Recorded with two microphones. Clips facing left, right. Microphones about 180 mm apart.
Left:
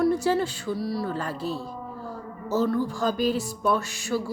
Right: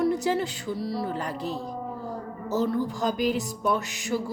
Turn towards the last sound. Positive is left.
turn(degrees=-20)  # may be behind; listen again after turning